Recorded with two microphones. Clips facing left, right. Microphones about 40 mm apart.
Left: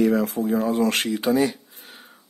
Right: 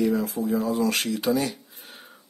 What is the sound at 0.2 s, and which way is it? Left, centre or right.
Speech, left.